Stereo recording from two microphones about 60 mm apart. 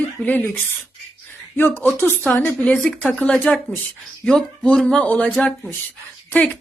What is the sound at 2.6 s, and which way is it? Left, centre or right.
A woman's voice, centre.